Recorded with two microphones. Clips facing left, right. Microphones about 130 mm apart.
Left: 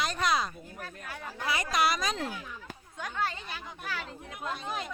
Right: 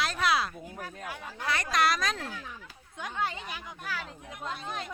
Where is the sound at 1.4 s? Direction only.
5° left (ahead or behind).